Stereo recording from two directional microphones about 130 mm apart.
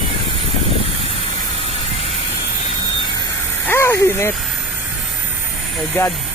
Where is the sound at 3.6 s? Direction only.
20° left (ahead or behind).